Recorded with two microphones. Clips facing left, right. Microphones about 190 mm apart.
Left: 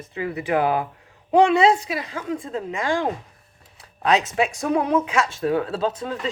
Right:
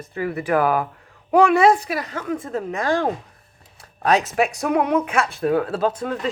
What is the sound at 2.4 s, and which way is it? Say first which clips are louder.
Speech: right 2 dB; 50° right (ahead or behind).